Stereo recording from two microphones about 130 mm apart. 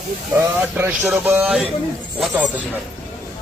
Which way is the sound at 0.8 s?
15° right (ahead or behind).